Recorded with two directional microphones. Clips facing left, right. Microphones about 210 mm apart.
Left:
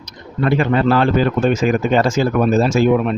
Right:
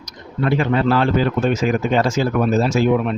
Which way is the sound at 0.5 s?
55° left (ahead or behind).